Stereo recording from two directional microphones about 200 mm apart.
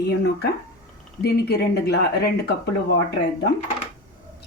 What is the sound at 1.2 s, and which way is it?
Speech, 55° left (ahead or behind).